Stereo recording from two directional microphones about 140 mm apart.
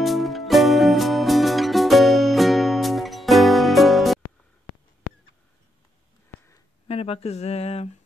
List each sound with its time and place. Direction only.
0.0 s music: centre (ahead or behind)
6.9 s speech: 45° left (ahead or behind)